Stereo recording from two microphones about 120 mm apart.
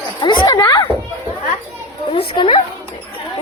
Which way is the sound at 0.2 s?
40° left (ahead or behind).